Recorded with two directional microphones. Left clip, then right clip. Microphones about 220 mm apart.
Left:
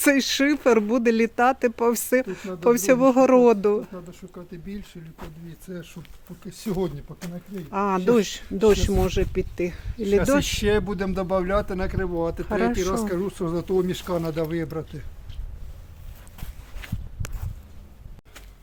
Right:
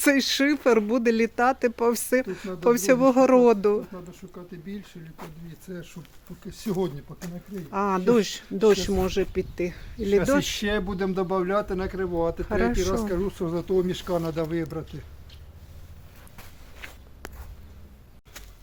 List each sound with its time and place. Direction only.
0.0 s speech: 15° left (ahead or behind)
3.9 s speech: 40° left (ahead or behind)
7.7 s speech: 15° left (ahead or behind)
10.6 s speech: 50° left (ahead or behind)
12.5 s speech: 15° left (ahead or behind)
13.1 s speech: 50° left (ahead or behind)
16.8 s a sound: 40° left (ahead or behind)